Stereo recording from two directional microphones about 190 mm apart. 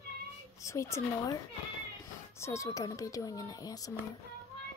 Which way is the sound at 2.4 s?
15° left (ahead or behind).